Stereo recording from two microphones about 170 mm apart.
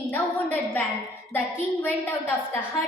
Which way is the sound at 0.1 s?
10° left (ahead or behind).